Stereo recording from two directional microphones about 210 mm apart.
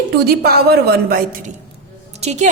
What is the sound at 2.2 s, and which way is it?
Speech, 30° right (ahead or behind).